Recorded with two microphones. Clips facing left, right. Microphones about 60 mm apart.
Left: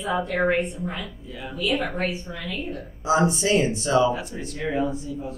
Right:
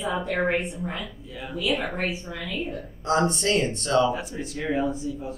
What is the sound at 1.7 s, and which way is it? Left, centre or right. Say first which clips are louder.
Speech: left 2 dB; left.